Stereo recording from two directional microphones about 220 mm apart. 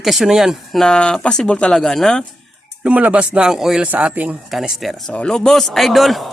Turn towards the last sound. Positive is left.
turn(degrees=0)  # may be behind; listen again after turning